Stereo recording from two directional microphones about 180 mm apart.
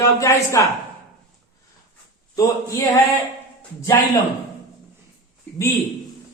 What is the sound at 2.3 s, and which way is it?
A man's voice, 20° left (ahead or behind).